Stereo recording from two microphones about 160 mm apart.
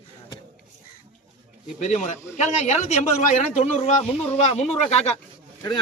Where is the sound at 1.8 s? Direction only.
50° left (ahead or behind).